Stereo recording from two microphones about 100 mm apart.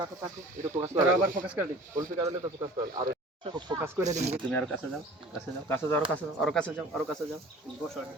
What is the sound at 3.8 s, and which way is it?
Speech, 25° right (ahead or behind).